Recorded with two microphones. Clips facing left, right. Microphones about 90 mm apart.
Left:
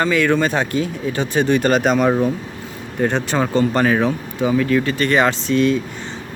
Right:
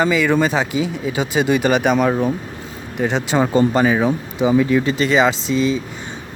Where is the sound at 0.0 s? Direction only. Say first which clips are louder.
Right 1 dB; 5° right (ahead or behind).